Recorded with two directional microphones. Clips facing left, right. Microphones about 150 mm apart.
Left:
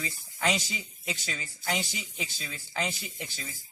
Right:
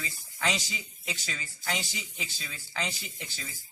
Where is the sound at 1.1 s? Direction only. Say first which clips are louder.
Left 2 dB; 20° left (ahead or behind).